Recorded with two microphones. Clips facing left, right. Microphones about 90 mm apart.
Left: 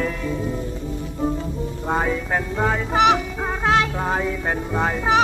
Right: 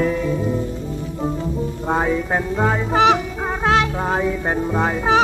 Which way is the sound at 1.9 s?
15° right (ahead or behind).